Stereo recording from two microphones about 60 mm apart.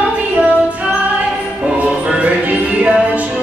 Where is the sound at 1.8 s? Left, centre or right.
Right.